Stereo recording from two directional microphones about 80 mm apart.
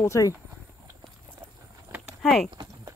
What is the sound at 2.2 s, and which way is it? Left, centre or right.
Speech, centre.